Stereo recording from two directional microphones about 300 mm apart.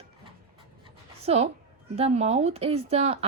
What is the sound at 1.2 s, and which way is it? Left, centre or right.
A woman's voice, right.